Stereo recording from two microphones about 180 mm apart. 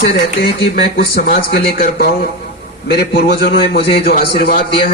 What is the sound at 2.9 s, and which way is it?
A man's voice, 70° left (ahead or behind).